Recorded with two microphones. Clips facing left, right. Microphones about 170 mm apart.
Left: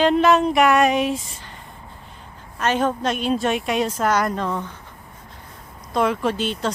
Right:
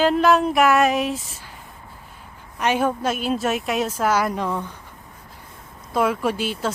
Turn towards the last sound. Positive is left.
turn(degrees=-5)  # may be behind; listen again after turning